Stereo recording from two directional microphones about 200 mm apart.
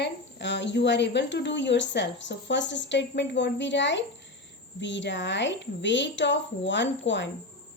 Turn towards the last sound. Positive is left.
turn(degrees=65)  # may be behind; listen again after turning